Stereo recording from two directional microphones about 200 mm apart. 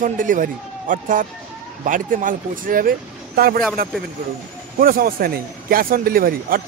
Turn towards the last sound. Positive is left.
turn(degrees=-45)  # may be behind; listen again after turning